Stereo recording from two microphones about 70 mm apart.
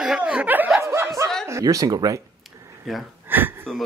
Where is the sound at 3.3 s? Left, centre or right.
Right.